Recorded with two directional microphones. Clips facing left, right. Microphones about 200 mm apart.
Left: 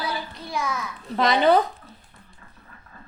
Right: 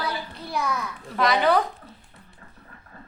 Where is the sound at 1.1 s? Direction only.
25° left (ahead or behind).